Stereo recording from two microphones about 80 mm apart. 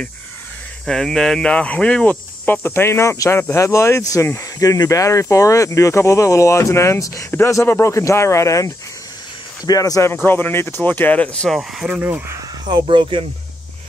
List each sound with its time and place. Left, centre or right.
0.8 s speech: centre
2.4 s speech: left
7.2 s speech: left
10.1 s speech: left
11.9 s speech: right
12.6 s speech: right